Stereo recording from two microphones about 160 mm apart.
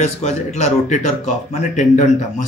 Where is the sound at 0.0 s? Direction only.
45° left (ahead or behind).